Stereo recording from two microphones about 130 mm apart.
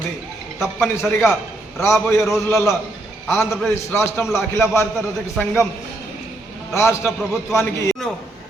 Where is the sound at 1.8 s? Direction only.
20° left (ahead or behind).